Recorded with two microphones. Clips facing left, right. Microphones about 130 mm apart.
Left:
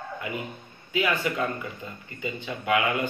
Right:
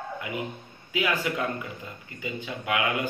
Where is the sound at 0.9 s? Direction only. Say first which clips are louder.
Left 1 dB; 15° right (ahead or behind).